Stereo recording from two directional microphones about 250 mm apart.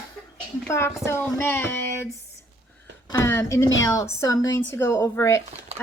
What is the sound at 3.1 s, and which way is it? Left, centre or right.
Speech, centre.